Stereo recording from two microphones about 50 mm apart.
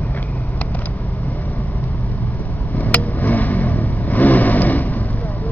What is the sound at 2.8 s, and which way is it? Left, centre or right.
Vehicle, left.